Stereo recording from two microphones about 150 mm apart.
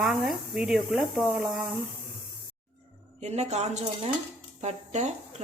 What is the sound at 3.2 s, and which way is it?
Speech, 45° right (ahead or behind).